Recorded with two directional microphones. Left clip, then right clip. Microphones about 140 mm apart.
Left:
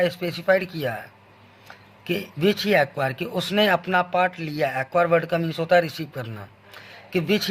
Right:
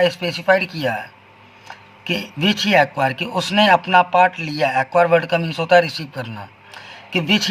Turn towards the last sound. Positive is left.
turn(degrees=30)  # may be behind; listen again after turning